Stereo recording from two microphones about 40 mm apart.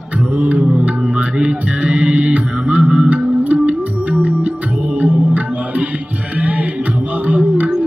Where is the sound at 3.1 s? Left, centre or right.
Right.